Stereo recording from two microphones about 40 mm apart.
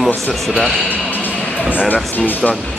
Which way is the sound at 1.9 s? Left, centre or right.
Left.